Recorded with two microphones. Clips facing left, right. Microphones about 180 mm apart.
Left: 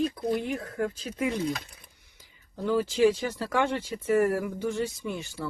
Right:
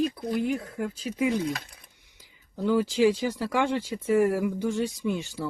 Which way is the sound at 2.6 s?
15° right (ahead or behind).